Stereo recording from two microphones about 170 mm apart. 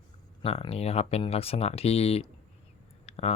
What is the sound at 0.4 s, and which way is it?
Speech, 35° left (ahead or behind).